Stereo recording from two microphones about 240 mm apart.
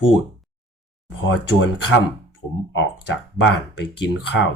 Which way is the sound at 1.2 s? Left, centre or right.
Left.